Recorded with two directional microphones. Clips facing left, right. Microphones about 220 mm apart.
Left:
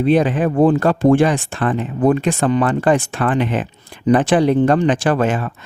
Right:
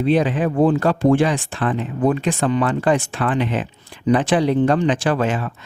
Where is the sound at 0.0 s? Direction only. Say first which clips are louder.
Left 3 dB; 50° left (ahead or behind).